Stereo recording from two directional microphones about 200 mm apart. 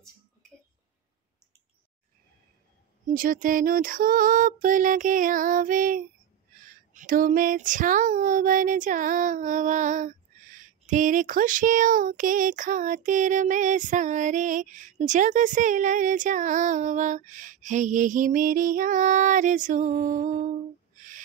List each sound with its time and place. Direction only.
3.1 s music: 45° right (ahead or behind)
6.9 s child singing: 40° right (ahead or behind)